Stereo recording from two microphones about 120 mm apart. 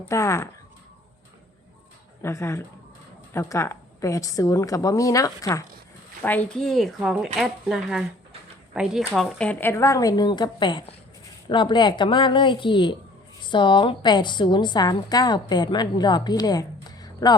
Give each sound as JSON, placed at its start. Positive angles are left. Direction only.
{"t": 0.1, "sound": "a woman's voice", "side_deg": 25}
{"t": 2.2, "sound": "a woman's voice", "side_deg": 20}
{"t": 6.2, "sound": "speech", "side_deg": 15}
{"t": 6.6, "sound": "a woman's voice", "side_deg": 5}